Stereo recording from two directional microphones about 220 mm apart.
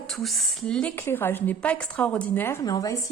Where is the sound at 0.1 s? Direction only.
Centre (ahead or behind).